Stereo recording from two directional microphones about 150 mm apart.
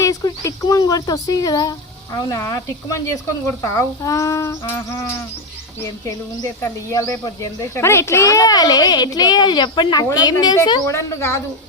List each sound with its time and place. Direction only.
0.0 s a child's voice: 25° left (ahead or behind)
6.6 s a child's voice: 20° left (ahead or behind)